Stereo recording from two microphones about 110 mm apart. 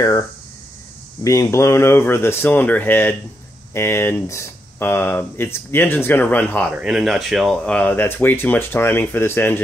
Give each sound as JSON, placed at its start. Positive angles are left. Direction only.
{"t": 0.0, "sound": "speech", "side_deg": 35}
{"t": 6.7, "sound": "speech", "side_deg": -5}
{"t": 7.6, "sound": "speech", "side_deg": 10}